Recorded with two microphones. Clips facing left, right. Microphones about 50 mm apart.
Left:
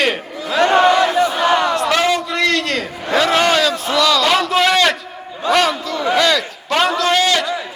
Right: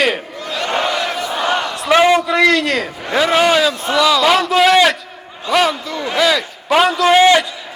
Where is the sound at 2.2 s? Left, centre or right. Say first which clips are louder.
Right 4 dB; centre.